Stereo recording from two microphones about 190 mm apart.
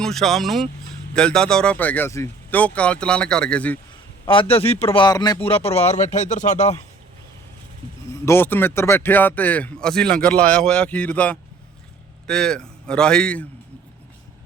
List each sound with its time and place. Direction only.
0.0 s speech: centre (ahead or behind)
4.3 s a man's voice: 30° left (ahead or behind)
8.1 s speech: 15° left (ahead or behind)